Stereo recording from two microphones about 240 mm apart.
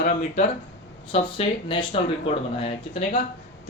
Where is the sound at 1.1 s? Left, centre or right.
Left.